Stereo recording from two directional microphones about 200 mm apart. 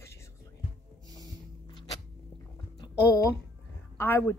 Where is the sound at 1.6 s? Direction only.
25° left (ahead or behind).